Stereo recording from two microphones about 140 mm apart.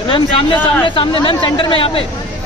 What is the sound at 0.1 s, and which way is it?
Speech, 35° left (ahead or behind).